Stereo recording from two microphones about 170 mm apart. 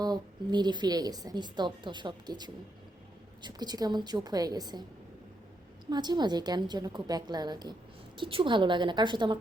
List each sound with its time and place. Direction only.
0.0 s a woman's voice: 25° right (ahead or behind)
5.8 s a woman's voice: 25° right (ahead or behind)